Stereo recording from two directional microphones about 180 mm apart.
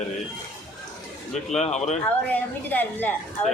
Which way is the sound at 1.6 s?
40° left (ahead or behind).